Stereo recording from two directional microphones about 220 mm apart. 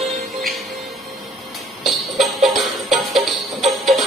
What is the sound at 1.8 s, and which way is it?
Music, centre (ahead or behind).